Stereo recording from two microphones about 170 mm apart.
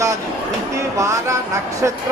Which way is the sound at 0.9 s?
20° right (ahead or behind).